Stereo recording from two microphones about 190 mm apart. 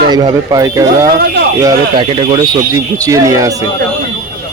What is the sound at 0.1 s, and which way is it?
Speech, 20° right (ahead or behind).